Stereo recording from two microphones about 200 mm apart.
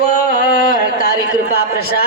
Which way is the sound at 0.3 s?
40° left (ahead or behind).